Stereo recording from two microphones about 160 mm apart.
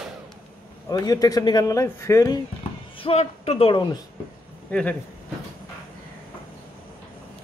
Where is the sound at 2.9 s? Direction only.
40° left (ahead or behind).